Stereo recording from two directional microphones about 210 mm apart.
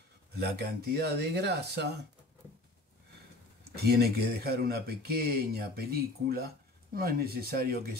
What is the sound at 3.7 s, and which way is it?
Speech, 50° right (ahead or behind).